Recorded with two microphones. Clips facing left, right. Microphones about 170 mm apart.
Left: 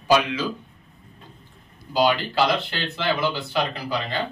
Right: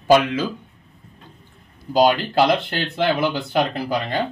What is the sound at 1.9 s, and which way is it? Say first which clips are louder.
Speech: right 4 dB; 50° right (ahead or behind).